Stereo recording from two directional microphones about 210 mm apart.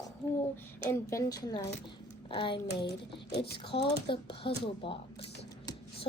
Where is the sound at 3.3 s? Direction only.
50° left (ahead or behind).